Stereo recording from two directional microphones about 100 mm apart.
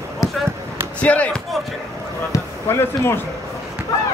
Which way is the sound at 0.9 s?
15° left (ahead or behind).